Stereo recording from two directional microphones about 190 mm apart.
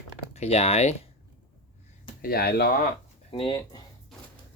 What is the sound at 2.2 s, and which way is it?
Speech, 55° left (ahead or behind).